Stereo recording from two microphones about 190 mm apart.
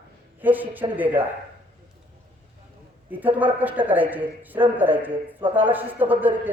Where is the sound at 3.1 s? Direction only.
10° right (ahead or behind).